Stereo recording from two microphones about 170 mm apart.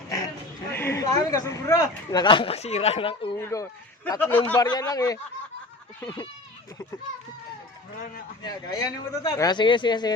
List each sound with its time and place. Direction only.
0.7 s a man's voice: 15° left (ahead or behind); by 3.3 s 30° left (ahead or behind)
3.3 s a man's voice: 15° left (ahead or behind)
4.6 s a man's voice: 20° left (ahead or behind)
8.4 s a man's voice: 20° left (ahead or behind)